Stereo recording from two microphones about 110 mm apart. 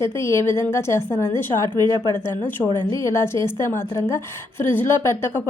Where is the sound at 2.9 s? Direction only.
25° left (ahead or behind).